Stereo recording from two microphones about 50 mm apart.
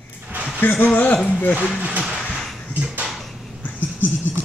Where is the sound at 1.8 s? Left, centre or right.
Right.